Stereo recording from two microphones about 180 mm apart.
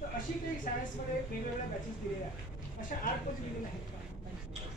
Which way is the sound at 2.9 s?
50° left (ahead or behind).